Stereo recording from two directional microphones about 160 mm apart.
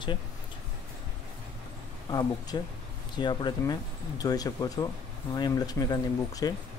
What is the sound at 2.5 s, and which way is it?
Speech, 25° left (ahead or behind).